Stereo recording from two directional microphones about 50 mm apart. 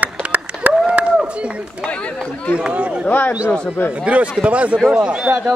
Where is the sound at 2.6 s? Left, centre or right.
Right.